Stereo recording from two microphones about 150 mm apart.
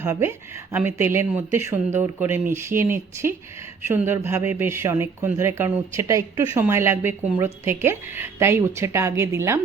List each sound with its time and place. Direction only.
0.0 s speech: 15° right (ahead or behind)